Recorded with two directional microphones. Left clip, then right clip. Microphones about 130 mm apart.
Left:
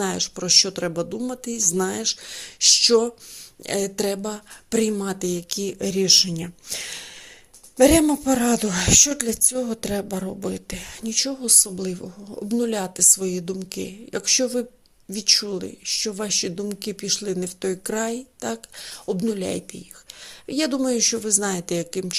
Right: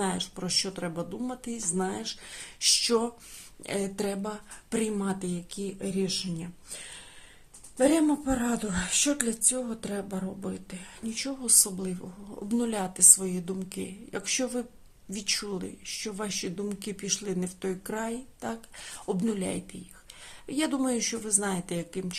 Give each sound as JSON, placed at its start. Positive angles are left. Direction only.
{"t": 0.0, "sound": "speech", "side_deg": 50}
{"t": 0.3, "sound": "speech", "side_deg": 40}
{"t": 2.0, "sound": "speech", "side_deg": 40}
{"t": 7.8, "sound": "speech", "side_deg": 55}
{"t": 11.1, "sound": "speech", "side_deg": 35}
{"t": 19.4, "sound": "speech", "side_deg": 40}